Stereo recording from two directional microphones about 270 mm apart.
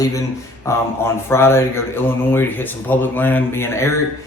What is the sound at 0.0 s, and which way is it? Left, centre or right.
Speech, centre.